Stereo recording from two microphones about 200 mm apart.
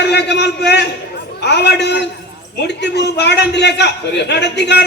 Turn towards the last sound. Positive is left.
turn(degrees=55)  # may be behind; listen again after turning